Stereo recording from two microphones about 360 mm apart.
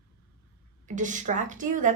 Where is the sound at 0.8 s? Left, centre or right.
Right.